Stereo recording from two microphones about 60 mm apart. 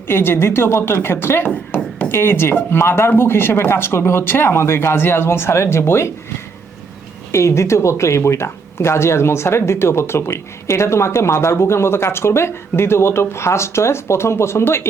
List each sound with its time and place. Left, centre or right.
0.1 s speech: left
1.5 s music: left
2.0 s speech: left
7.3 s speech: left